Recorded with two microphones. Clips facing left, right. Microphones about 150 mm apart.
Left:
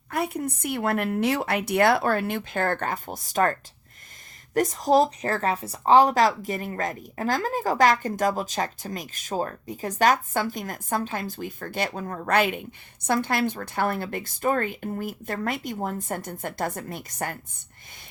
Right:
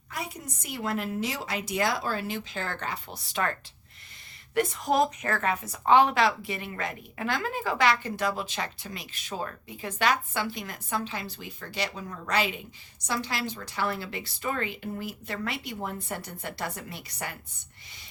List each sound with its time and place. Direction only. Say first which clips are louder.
0.1 s a woman's voice: left 10 dB; 60° left (ahead or behind)